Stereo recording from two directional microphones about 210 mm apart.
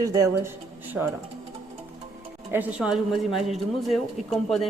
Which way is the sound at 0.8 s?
10° right (ahead or behind).